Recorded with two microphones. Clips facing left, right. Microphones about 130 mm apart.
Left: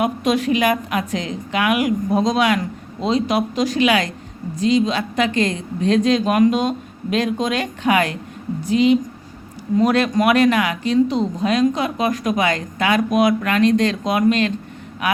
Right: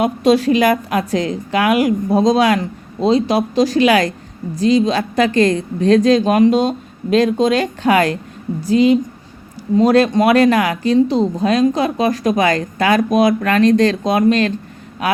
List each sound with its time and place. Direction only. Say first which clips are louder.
0.0 s speech: right 5 dB; 30° right (ahead or behind)